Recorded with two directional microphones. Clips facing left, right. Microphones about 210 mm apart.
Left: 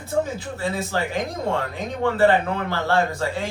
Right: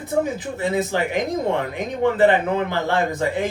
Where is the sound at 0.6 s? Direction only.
20° right (ahead or behind).